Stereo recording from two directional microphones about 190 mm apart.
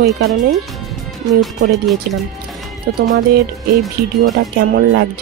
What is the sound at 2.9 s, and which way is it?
Speech, 50° right (ahead or behind).